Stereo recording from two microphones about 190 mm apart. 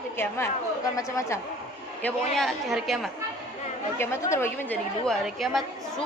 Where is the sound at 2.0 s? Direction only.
5° left (ahead or behind).